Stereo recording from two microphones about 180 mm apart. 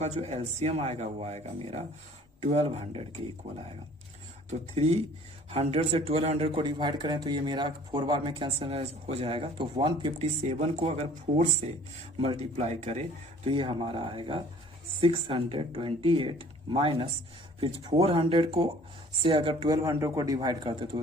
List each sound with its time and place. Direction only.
0.0 s speech: 40° right (ahead or behind)
4.4 s speech: 35° right (ahead or behind)
10.5 s speech: 35° right (ahead or behind)